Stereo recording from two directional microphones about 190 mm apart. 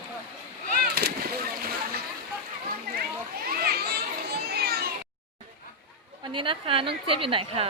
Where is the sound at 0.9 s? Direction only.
55° right (ahead or behind).